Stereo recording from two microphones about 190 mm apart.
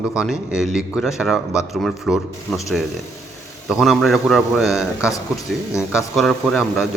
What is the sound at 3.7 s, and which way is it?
A man's voice, centre (ahead or behind).